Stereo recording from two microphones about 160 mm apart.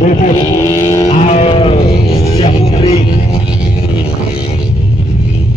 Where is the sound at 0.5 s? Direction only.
20° left (ahead or behind).